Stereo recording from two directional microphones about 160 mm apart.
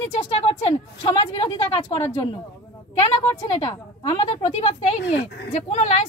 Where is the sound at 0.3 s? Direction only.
35° left (ahead or behind).